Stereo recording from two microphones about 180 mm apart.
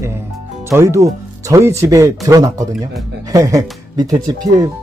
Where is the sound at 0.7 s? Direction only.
15° right (ahead or behind).